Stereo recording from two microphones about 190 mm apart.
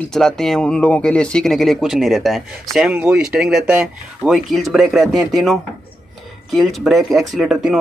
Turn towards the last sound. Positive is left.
turn(degrees=0)  # may be behind; listen again after turning